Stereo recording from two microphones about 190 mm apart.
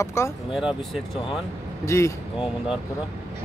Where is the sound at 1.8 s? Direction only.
15° left (ahead or behind).